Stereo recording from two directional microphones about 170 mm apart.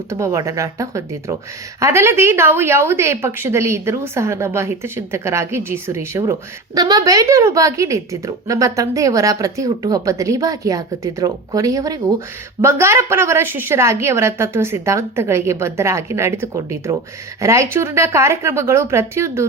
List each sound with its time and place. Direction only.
0.1 s a woman's voice: 15° right (ahead or behind)